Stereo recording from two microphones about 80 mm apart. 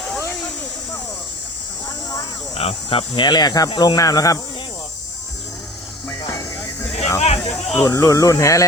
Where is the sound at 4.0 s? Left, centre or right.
Left.